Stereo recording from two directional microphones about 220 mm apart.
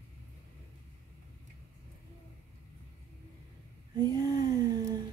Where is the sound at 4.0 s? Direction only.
15° right (ahead or behind).